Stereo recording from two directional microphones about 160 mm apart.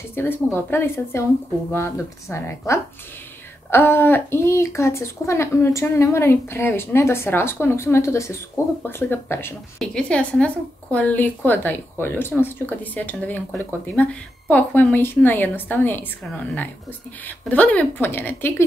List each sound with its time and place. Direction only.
0.1 s a woman's voice: 15° left (ahead or behind)
17.2 s a woman's voice: 10° left (ahead or behind)